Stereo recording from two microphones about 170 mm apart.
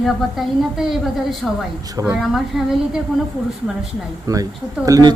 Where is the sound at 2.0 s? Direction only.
15° right (ahead or behind).